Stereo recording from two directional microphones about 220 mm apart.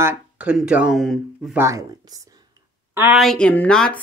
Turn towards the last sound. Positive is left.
turn(degrees=5)  # may be behind; listen again after turning